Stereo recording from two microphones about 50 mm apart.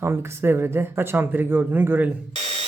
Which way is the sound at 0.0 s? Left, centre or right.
Right.